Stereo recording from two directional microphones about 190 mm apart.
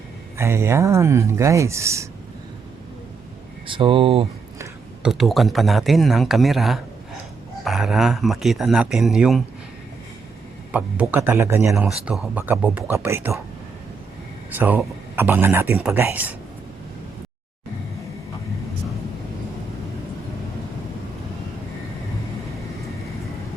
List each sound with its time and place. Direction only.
0.3 s speech: 15° right (ahead or behind)
3.7 s speech: 25° right (ahead or behind)
5.0 s speech: centre (ahead or behind)
10.7 s speech: 10° right (ahead or behind)
14.5 s speech: 10° right (ahead or behind)